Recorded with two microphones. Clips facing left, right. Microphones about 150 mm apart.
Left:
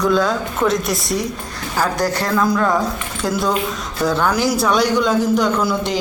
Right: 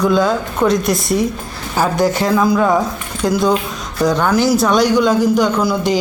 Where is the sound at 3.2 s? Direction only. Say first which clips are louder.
Right 5 dB; centre (ahead or behind).